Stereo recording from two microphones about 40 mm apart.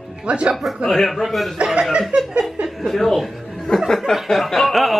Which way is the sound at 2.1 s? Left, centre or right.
Right.